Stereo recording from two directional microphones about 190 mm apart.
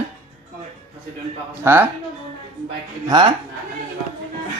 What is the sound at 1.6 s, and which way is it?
Speech, 10° right (ahead or behind).